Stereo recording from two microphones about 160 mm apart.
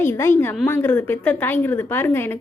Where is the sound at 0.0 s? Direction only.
15° left (ahead or behind).